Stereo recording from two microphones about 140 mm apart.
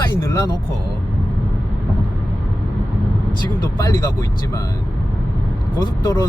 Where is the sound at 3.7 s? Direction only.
25° left (ahead or behind).